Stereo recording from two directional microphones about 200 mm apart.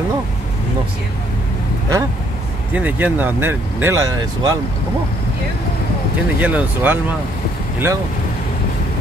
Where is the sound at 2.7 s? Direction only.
10° right (ahead or behind).